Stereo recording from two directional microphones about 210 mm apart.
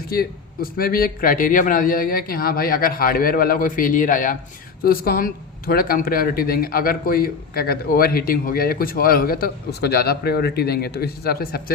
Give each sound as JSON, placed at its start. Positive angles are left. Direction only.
{"t": 0.1, "sound": "speech", "side_deg": 45}